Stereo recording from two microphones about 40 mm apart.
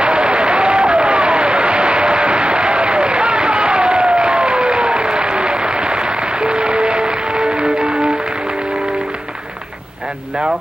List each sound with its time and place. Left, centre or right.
0.0 s applause: right